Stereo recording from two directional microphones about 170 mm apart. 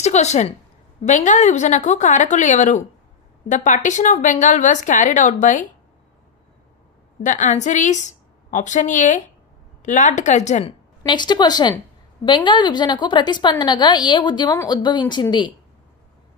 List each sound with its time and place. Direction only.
0.0 s a woman's voice: 40° left (ahead or behind)
7.2 s speech: 45° left (ahead or behind)
11.0 s a woman's voice: 25° left (ahead or behind)